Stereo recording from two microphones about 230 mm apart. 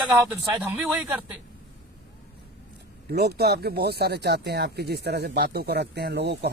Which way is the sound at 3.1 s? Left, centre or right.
Right.